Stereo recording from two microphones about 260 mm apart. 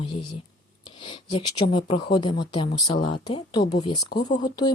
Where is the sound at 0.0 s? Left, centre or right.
Centre.